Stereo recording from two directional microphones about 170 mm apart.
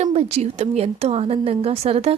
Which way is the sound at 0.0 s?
35° right (ahead or behind).